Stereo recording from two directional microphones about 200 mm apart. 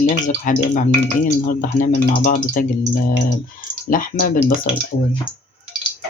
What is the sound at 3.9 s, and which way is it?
Speech, 45° left (ahead or behind).